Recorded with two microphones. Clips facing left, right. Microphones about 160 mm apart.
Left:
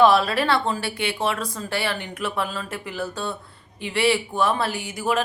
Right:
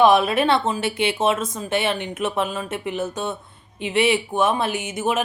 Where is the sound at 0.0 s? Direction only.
20° right (ahead or behind).